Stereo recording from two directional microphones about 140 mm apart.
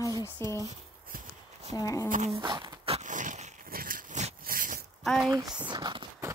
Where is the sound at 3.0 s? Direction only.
65° right (ahead or behind); by 4.2 s 85° right.